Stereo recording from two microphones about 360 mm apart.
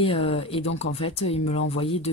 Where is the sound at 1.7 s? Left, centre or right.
Centre.